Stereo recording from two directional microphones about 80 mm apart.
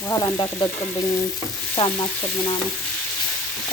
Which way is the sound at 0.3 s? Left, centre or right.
Left.